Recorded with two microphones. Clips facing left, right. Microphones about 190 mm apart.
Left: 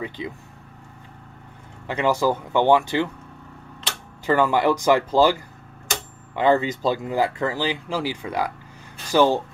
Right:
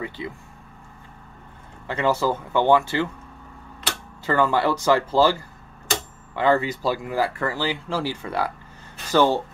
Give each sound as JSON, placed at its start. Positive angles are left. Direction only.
{"t": 0.2, "sound": "speech", "side_deg": 20}
{"t": 1.9, "sound": "speech", "side_deg": 15}
{"t": 4.3, "sound": "speech", "side_deg": 15}